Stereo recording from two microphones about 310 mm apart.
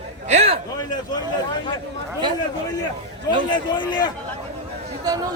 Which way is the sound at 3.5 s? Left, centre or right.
Centre.